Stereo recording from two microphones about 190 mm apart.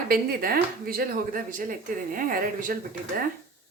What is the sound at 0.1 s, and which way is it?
Speech, 50° right (ahead or behind).